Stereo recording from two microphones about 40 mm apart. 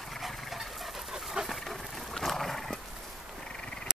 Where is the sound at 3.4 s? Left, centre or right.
Centre.